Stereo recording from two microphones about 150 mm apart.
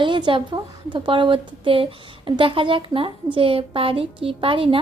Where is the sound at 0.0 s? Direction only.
30° right (ahead or behind).